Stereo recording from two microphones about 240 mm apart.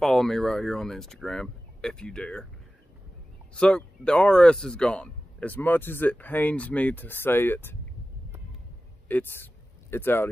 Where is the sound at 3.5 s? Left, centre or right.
Centre.